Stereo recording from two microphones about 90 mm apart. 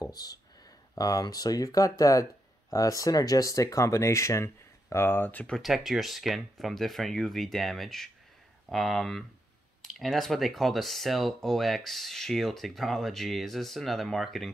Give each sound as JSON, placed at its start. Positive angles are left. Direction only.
{"t": 0.0, "sound": "speech", "side_deg": 45}
{"t": 5.5, "sound": "speech", "side_deg": 0}